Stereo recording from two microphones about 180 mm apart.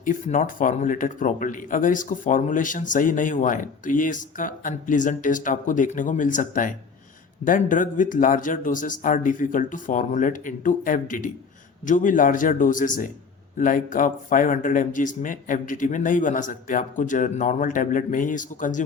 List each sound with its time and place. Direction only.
0.0 s a man's voice: 45° left (ahead or behind)